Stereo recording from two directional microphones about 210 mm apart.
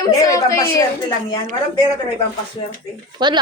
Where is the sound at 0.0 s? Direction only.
15° left (ahead or behind).